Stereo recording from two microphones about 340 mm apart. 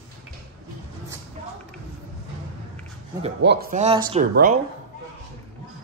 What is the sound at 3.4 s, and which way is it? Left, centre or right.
Speech, centre.